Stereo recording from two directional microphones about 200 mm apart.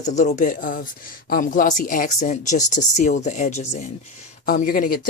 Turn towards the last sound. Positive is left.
turn(degrees=45)  # may be behind; listen again after turning